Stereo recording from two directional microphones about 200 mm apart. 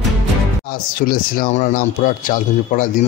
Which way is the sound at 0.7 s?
45° left (ahead or behind).